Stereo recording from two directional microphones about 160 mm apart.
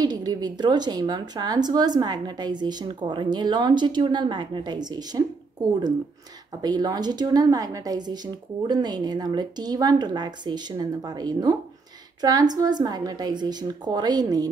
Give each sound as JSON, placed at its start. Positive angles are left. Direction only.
{"t": 0.0, "sound": "speech", "side_deg": -25}